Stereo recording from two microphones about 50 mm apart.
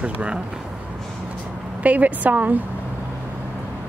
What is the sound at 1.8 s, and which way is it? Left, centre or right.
Speech, right.